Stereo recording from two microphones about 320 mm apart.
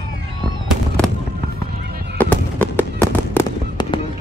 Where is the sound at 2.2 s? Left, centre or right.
Centre.